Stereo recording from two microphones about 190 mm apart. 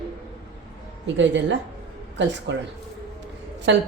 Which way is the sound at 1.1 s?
70° right (ahead or behind).